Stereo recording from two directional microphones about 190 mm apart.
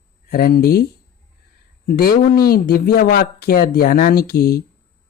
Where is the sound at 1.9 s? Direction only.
55° left (ahead or behind).